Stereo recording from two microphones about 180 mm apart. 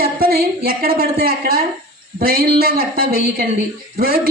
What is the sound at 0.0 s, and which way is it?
A woman's voice, 55° right (ahead or behind).